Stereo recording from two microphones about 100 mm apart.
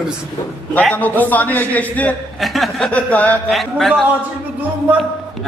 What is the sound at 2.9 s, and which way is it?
Speech, 15° left (ahead or behind).